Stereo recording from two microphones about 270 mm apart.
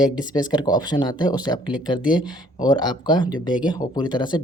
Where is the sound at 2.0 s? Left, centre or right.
Centre.